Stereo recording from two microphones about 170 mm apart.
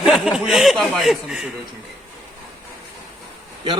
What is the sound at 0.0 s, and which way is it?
A man's voice, 5° right (ahead or behind).